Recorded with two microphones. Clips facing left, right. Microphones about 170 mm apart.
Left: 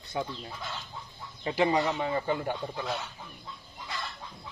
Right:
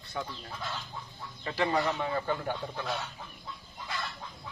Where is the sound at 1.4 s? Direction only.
15° left (ahead or behind).